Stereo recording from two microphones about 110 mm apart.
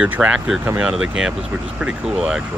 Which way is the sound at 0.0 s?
10° right (ahead or behind).